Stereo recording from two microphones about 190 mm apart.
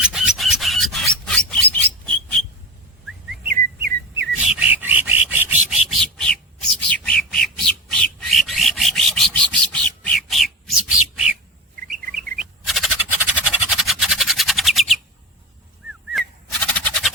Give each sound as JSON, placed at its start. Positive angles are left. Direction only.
{"t": 0.0, "sound": "rub", "side_deg": -5}
{"t": 3.4, "sound": "chirp", "side_deg": -50}
{"t": 4.3, "sound": "rub", "side_deg": -5}
{"t": 12.6, "sound": "a sound", "side_deg": 0}
{"t": 16.1, "sound": "bird", "side_deg": 5}